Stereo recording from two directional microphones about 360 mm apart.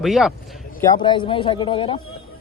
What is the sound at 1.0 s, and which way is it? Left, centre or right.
Speech, centre.